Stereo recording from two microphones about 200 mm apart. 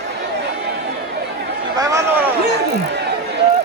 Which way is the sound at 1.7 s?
15° right (ahead or behind).